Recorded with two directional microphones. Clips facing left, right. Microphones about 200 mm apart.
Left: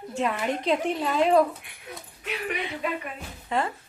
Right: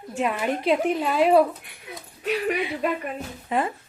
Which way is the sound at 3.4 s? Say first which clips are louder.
Right 2 dB; 15° right (ahead or behind).